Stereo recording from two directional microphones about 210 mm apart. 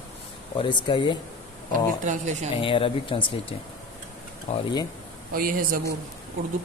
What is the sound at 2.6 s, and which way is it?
A man's voice, 25° left (ahead or behind).